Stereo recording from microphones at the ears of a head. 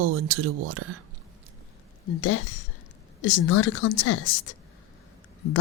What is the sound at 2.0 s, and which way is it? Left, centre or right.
Speech, left.